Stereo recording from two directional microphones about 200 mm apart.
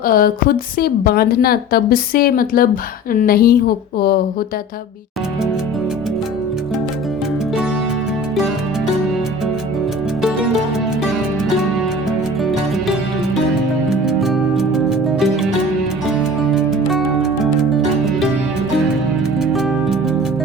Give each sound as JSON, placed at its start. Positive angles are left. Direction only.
{"t": 0.0, "sound": "a woman's voice", "side_deg": 45}
{"t": 10.2, "sound": "music", "side_deg": 0}
{"t": 13.9, "sound": "music", "side_deg": 0}
{"t": 19.4, "sound": "music", "side_deg": 0}